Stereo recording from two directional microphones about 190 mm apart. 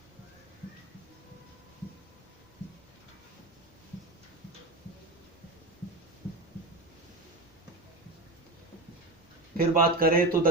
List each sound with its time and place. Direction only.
9.6 s a man's voice: 50° right (ahead or behind)